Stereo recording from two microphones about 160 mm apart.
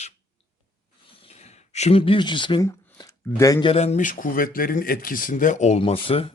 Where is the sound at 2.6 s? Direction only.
20° left (ahead or behind).